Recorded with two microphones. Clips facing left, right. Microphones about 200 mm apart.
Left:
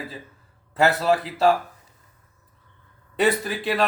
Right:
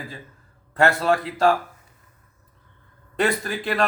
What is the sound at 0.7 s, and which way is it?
Speech, 5° left (ahead or behind).